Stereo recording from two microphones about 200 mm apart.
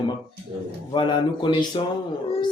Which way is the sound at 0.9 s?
25° left (ahead or behind).